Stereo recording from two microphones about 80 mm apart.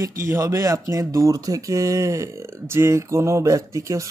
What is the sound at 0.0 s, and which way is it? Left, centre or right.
Speech, right.